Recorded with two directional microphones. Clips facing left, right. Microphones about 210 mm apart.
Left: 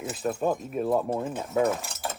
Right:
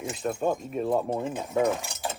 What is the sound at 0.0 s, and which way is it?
Speech, 5° left (ahead or behind).